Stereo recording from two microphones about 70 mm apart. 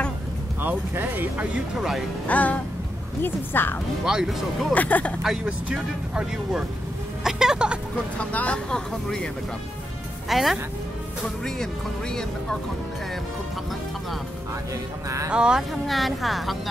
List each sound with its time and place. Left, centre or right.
0.6 s speech: right
1.5 s a woman's voice: centre
2.2 s speech: left
4.0 s speech: centre
4.7 s speech: left
5.2 s a woman's voice: centre
8.2 s speech: centre
10.2 s a woman's voice: centre
15.2 s speech: centre
15.7 s a woman's voice: centre